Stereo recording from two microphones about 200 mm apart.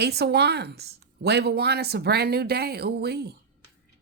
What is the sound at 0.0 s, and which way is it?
Speech, 55° right (ahead or behind).